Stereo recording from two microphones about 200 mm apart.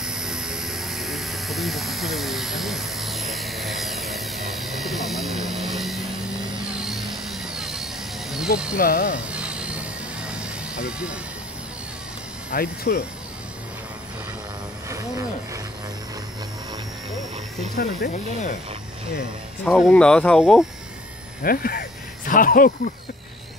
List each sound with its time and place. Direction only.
0.0 s a sound: 5° right (ahead or behind)
6.8 s vehicle: centre (ahead or behind)
8.7 s speech: 45° left (ahead or behind)
9.3 s vehicle: 5° right (ahead or behind)
12.4 s speech: 50° left (ahead or behind)
14.9 s vehicle: 15° right (ahead or behind)
17.7 s speech: 40° left (ahead or behind)
19.6 s speech: 5° left (ahead or behind)
21.4 s a sound: 50° left (ahead or behind)